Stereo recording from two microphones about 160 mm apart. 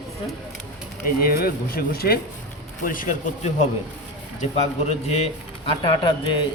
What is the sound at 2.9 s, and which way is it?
Speech, 55° left (ahead or behind).